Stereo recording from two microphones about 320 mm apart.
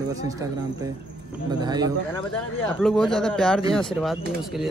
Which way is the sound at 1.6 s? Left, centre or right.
Centre.